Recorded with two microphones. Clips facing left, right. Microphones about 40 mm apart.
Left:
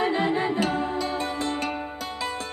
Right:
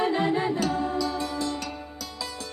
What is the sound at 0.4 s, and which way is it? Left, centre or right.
Music, left.